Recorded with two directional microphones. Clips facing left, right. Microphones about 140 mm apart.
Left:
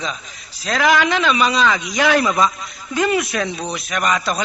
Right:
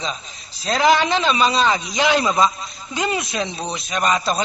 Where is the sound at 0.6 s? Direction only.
25° right (ahead or behind).